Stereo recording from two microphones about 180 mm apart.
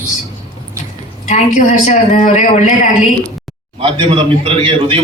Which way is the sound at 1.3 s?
45° left (ahead or behind).